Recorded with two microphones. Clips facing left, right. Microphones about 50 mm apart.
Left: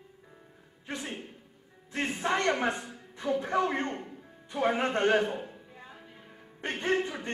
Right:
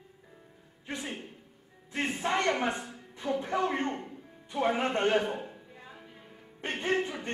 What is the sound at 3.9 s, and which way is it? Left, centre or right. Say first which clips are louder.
Music: right 1 dB; centre.